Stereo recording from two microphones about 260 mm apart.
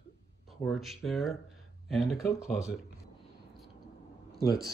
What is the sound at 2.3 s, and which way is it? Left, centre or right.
Speech, centre.